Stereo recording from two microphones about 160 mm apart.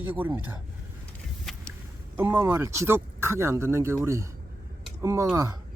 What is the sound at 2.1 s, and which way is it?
Speech, 10° right (ahead or behind).